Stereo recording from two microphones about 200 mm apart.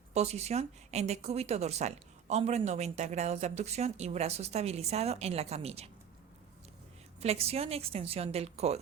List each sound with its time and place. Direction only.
0.1 s speech: 35° right (ahead or behind)
7.2 s speech: 30° right (ahead or behind)